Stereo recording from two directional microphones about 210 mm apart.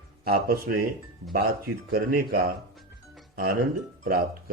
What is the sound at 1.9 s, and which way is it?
Speech, 45° right (ahead or behind).